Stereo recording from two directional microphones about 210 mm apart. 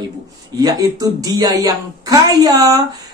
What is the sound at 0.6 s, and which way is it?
Speech, 20° right (ahead or behind).